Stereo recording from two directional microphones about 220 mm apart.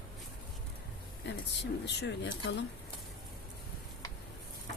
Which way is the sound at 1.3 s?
50° left (ahead or behind).